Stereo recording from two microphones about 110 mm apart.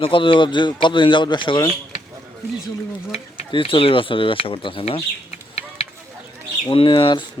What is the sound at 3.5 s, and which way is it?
Speech, 50° left (ahead or behind).